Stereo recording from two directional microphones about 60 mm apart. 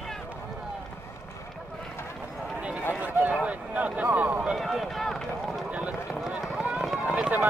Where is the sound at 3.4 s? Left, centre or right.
Right.